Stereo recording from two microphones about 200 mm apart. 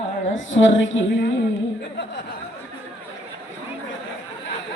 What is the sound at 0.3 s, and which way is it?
Speech, 70° left (ahead or behind).